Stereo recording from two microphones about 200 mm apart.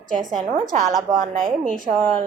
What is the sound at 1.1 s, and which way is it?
Speech, 20° right (ahead or behind).